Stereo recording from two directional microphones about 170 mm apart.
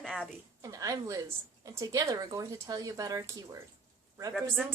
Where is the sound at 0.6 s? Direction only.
20° right (ahead or behind).